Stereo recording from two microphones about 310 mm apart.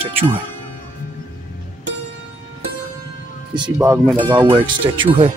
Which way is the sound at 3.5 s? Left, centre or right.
Centre.